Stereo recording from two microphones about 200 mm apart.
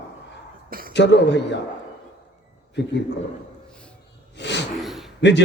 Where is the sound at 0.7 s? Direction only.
45° right (ahead or behind).